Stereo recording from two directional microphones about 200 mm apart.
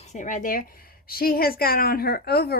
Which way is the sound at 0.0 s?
35° left (ahead or behind).